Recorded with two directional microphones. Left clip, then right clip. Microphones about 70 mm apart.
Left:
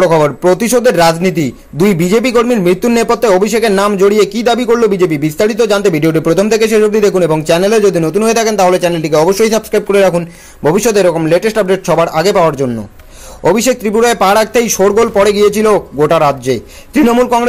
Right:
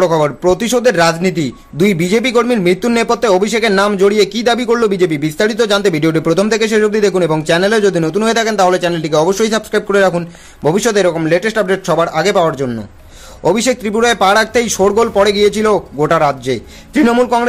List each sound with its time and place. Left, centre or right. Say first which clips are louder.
0.0 s a man's voice: left 3 dB; left
11.6 s speech: left 3 dB; centre
11.9 s a man's voice: left 2 dB; centre
14.7 s speech: left 2 dB; centre
15.2 s speech: left 3 dB; centre